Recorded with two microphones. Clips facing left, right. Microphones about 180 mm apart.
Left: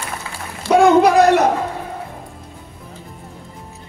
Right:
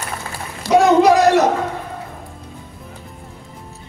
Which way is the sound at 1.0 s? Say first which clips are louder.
Even; 55° left (ahead or behind).